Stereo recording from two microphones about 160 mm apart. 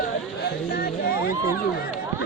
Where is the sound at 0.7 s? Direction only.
75° left (ahead or behind).